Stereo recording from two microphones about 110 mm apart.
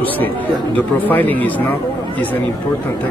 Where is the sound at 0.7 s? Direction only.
15° left (ahead or behind).